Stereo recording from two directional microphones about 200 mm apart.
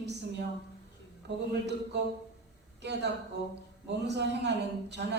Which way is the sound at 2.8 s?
60° right (ahead or behind).